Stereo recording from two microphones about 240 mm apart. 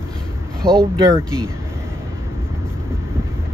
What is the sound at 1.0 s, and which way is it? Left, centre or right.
Speech, centre.